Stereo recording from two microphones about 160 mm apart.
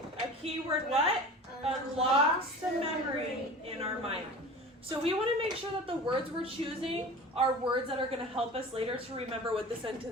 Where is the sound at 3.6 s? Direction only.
40° right (ahead or behind).